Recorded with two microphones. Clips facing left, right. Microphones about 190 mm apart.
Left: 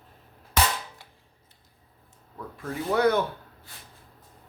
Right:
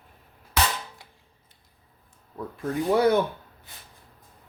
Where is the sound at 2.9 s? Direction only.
10° right (ahead or behind).